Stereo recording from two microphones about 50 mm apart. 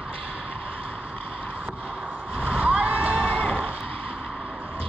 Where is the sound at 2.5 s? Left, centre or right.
Centre.